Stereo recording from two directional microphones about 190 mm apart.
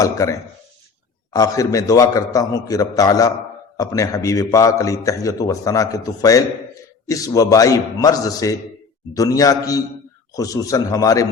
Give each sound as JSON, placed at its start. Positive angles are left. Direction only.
{"t": 0.0, "sound": "a man's voice", "side_deg": 15}